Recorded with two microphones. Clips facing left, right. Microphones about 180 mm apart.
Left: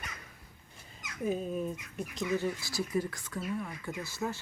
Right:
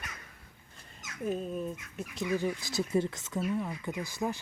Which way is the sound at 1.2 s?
Centre (ahead or behind).